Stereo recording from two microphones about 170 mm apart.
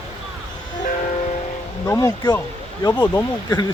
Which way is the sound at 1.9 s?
20° left (ahead or behind).